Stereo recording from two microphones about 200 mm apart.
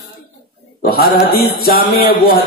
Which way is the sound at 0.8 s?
50° left (ahead or behind).